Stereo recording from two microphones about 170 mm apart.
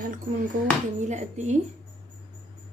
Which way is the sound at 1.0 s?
45° right (ahead or behind).